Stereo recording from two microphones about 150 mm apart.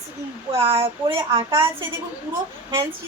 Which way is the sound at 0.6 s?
40° right (ahead or behind).